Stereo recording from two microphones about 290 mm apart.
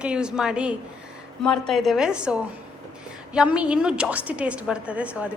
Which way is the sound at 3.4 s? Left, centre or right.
Centre.